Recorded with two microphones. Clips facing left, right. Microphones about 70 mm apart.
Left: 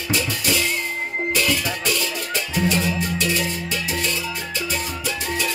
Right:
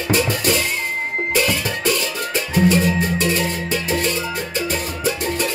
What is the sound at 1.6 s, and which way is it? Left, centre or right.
Music, right.